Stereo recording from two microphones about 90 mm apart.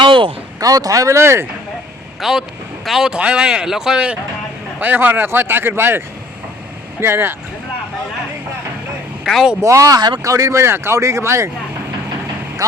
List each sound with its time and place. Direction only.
0.0 s a sound: 70° right (ahead or behind)
0.6 s speech: 40° right (ahead or behind)
2.2 s speech: centre (ahead or behind); by 6.0 s 25° right (ahead or behind)
7.0 s speech: 30° right (ahead or behind)
9.2 s speech: 5° right (ahead or behind)
9.6 s speech: 35° right (ahead or behind)